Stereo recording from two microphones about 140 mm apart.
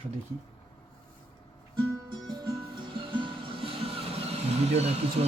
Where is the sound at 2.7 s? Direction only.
35° right (ahead or behind).